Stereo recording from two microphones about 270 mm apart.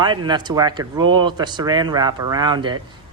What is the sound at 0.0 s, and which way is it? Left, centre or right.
A man's voice, centre.